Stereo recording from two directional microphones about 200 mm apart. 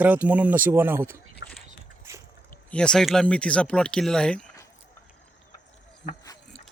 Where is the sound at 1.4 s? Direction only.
65° left (ahead or behind).